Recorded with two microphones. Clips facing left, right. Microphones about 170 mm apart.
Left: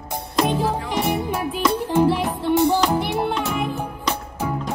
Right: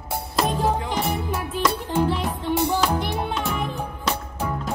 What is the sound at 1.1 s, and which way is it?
Music, 20° left (ahead or behind).